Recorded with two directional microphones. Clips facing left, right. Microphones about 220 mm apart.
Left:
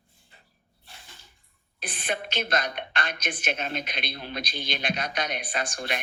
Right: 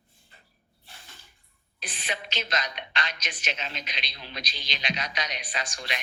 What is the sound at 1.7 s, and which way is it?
A woman's voice, 55° left (ahead or behind).